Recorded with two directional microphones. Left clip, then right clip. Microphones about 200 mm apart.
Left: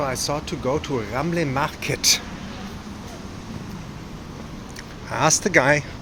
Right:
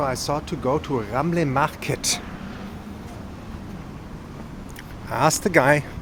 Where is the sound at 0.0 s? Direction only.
15° right (ahead or behind).